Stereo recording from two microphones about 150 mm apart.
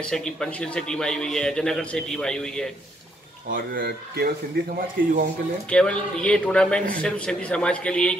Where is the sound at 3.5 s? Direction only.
80° right.